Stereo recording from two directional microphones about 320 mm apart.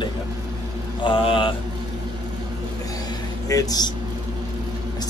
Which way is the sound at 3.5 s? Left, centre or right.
Centre.